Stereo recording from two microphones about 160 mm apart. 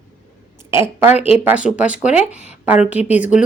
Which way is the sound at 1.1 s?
40° left (ahead or behind).